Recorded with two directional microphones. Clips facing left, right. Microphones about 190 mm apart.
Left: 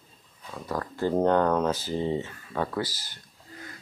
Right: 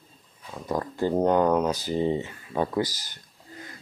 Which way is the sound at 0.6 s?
20° right (ahead or behind).